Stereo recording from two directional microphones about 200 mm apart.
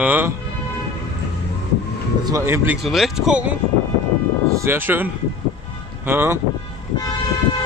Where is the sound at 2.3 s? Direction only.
15° right (ahead or behind).